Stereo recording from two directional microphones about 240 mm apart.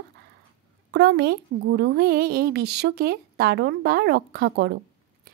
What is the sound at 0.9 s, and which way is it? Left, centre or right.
A woman's voice, right.